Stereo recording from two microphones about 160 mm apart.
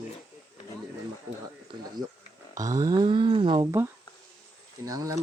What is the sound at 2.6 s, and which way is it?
Speech, 20° right (ahead or behind).